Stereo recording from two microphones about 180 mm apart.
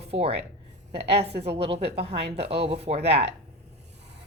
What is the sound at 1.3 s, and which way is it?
Speech, 65° right (ahead or behind).